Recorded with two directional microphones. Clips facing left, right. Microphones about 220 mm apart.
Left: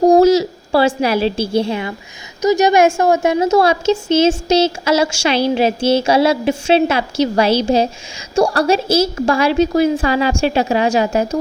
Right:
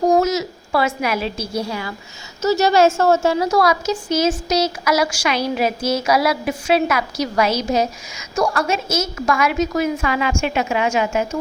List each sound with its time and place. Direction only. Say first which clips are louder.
0.0 s a woman's voice: left 7 dB; 30° left (ahead or behind)